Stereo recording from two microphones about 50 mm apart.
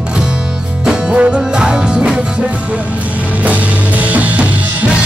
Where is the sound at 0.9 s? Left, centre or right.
Centre.